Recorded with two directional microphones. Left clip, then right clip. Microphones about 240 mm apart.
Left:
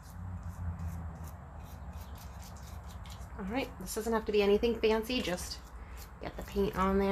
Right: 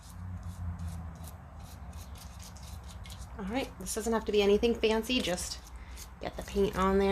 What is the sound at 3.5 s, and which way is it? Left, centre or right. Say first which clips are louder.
Speech: right 1 dB; right.